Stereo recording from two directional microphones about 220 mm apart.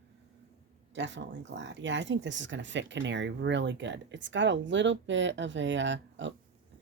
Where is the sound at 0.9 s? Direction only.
55° right (ahead or behind).